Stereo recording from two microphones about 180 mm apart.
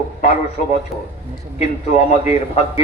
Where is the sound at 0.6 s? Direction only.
45° left (ahead or behind).